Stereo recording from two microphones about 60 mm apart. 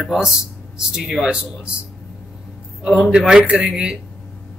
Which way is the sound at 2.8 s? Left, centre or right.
Centre.